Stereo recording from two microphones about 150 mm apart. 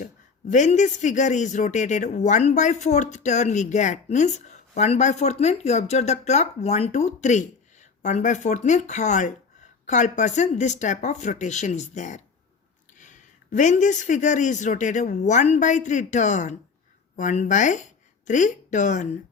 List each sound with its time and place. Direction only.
0.5 s speech: 55° left (ahead or behind)